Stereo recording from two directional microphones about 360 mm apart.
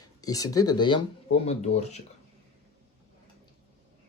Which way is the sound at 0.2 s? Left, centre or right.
Centre.